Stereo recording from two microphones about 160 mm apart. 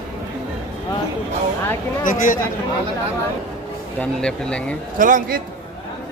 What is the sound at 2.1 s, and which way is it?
Speech, 55° left (ahead or behind).